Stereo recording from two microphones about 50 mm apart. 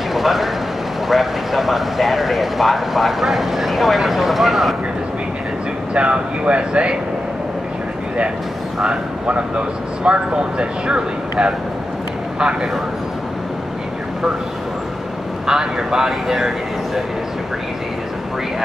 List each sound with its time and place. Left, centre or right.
0.1 s vehicle: centre
1.0 s speech: centre
5.9 s speech: right
10.0 s speech: right
15.4 s speech: centre